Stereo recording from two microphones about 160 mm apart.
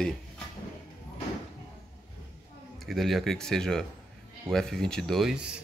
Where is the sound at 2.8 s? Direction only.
Centre (ahead or behind).